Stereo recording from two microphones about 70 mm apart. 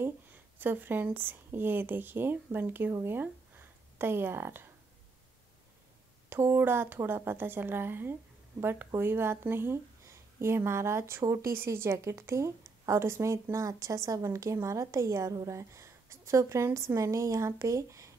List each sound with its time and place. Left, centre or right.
0.6 s speech: right
6.2 s a woman's voice: right
11.2 s a woman's voice: right
11.5 s a woman's voice: right